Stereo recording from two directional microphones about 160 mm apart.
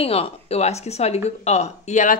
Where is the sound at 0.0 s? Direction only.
40° left (ahead or behind).